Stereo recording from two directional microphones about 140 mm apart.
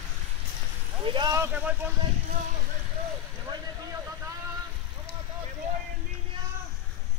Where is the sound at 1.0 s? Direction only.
35° right (ahead or behind).